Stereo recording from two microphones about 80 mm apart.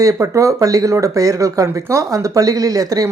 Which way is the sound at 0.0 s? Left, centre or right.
Right.